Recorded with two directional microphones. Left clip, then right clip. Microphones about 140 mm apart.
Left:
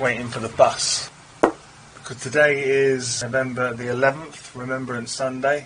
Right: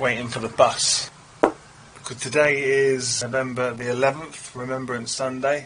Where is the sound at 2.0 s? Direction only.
25° right (ahead or behind).